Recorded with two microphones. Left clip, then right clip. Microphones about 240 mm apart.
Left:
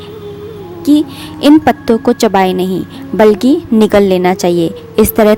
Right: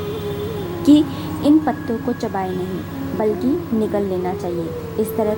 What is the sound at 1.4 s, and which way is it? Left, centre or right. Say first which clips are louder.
A woman's voice: left 9 dB; left.